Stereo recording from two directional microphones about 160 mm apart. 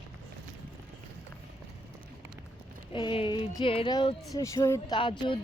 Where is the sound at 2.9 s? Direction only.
30° left (ahead or behind).